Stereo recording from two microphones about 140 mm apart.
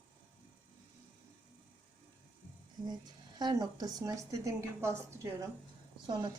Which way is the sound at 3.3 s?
30° right (ahead or behind).